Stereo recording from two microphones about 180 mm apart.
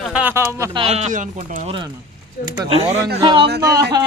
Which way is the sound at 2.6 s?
30° right (ahead or behind).